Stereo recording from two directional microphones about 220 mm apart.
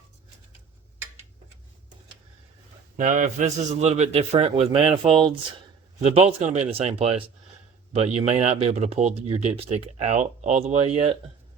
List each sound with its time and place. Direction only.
3.0 s a man's voice: 35° right (ahead or behind)